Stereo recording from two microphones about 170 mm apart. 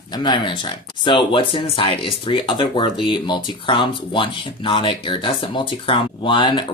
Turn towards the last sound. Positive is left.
turn(degrees=30)  # may be behind; listen again after turning